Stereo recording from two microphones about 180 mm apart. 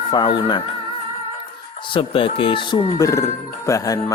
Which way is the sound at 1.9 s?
30° left (ahead or behind).